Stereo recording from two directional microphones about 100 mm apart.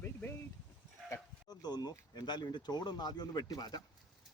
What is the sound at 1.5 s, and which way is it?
Speech, 40° left (ahead or behind).